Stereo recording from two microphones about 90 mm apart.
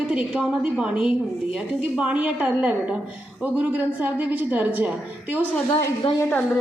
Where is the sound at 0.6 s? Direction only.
10° right (ahead or behind).